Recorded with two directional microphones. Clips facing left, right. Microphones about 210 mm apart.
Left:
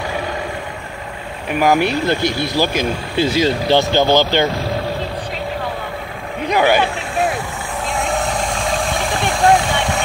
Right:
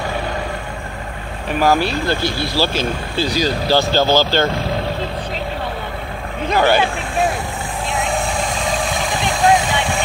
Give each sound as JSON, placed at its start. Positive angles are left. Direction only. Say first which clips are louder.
{"t": 1.5, "sound": "speech", "louder": "left 1 dB", "side_deg": 15}
{"t": 6.4, "sound": "speech", "louder": "even", "side_deg": 15}